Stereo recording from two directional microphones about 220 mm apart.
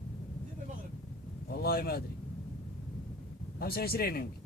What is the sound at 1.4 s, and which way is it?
Speech, 45° left (ahead or behind).